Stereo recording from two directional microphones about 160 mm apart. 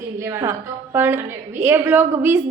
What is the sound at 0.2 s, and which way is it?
A woman's voice, 15° right (ahead or behind).